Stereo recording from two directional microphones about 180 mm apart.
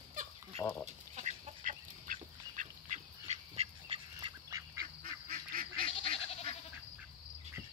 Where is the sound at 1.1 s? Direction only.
40° right (ahead or behind); by 4.6 s 20° right (ahead or behind).